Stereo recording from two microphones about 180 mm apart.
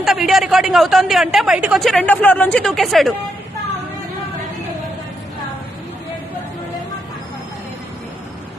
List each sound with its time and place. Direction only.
0.0 s a woman's voice: centre (ahead or behind)